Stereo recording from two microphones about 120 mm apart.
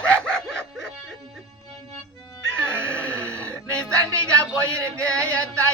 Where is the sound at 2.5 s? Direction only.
20° right (ahead or behind).